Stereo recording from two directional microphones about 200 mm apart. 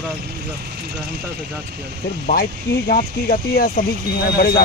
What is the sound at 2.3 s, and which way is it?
Speech, 40° left (ahead or behind).